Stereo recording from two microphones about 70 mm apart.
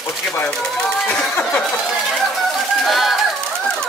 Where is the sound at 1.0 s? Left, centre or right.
Centre.